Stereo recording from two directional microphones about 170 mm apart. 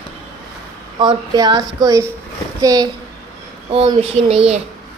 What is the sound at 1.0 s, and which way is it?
Speech, 25° right (ahead or behind).